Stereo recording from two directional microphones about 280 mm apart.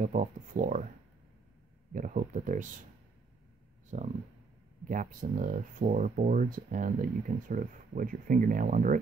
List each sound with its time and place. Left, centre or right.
0.0 s speech: right
2.0 s speech: right
3.9 s speech: right